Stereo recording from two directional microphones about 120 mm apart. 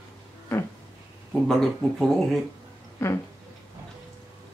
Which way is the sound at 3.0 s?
20° left (ahead or behind).